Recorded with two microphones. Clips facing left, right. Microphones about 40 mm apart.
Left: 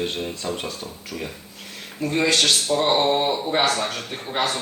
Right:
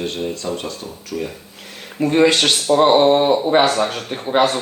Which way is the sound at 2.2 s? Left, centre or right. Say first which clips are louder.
Right 5 dB; right.